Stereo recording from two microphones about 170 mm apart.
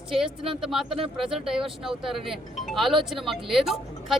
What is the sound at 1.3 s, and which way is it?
Speech, 5° right (ahead or behind).